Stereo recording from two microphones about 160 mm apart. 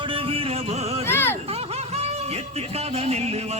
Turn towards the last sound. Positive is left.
turn(degrees=-40)  # may be behind; listen again after turning